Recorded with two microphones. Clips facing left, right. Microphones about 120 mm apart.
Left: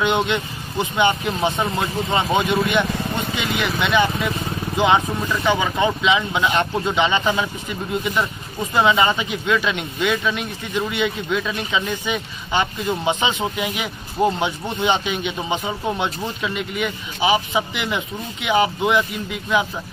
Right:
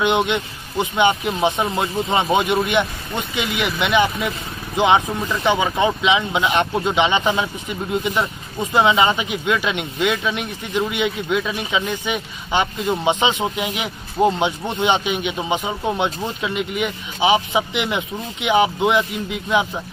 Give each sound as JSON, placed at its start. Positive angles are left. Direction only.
{"t": 0.0, "sound": "speech", "side_deg": -15}